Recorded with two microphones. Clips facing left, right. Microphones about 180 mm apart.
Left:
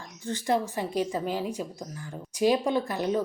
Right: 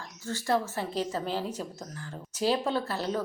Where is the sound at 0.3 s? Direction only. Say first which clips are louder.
Left 2 dB; 20° left (ahead or behind).